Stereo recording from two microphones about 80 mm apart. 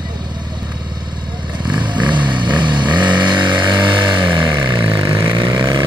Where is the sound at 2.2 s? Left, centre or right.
Right.